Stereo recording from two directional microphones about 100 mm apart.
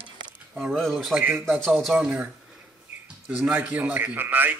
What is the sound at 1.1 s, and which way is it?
Speech, 15° right (ahead or behind).